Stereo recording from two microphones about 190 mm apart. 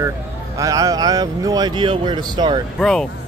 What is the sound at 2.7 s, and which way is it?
Speech, 5° left (ahead or behind).